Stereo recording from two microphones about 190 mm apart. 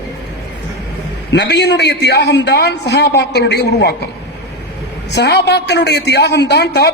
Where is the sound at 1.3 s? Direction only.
60° left (ahead or behind).